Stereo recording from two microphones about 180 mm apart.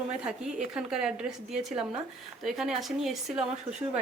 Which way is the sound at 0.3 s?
5° right (ahead or behind).